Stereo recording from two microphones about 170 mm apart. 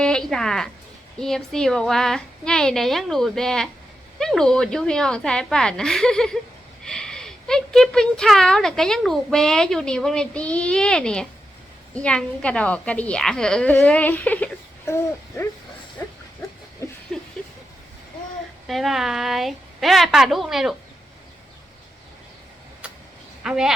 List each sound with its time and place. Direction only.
0.0 s a woman's voice: 5° left (ahead or behind)
16.8 s a sound: 15° left (ahead or behind)
18.7 s speech: centre (ahead or behind)
23.4 s speech: 5° right (ahead or behind)